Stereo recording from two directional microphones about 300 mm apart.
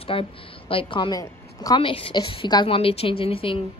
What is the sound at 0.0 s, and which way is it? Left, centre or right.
A woman's voice, centre.